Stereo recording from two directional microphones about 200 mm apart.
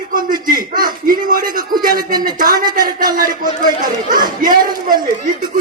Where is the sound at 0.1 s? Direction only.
45° right (ahead or behind).